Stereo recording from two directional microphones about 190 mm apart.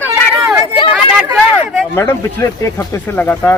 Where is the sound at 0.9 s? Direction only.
5° right (ahead or behind).